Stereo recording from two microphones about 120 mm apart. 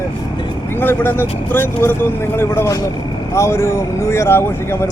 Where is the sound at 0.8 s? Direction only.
15° left (ahead or behind).